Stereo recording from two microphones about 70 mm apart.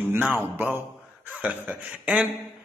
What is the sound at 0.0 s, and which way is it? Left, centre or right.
A man's voice, right.